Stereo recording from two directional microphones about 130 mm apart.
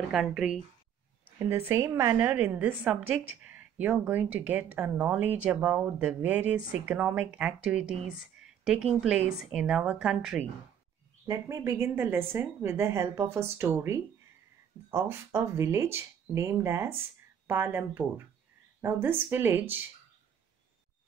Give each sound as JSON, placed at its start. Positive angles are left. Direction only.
{"t": 0.1, "sound": "a woman's voice", "side_deg": -5}
{"t": 1.4, "sound": "a woman's voice", "side_deg": -20}
{"t": 11.2, "sound": "speech", "side_deg": -25}